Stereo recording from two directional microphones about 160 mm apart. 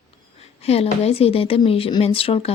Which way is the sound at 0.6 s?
40° left (ahead or behind).